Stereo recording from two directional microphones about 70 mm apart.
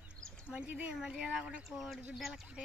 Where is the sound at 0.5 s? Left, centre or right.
Right.